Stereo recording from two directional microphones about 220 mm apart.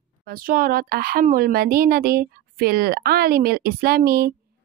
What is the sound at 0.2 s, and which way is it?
Speech, 40° right (ahead or behind).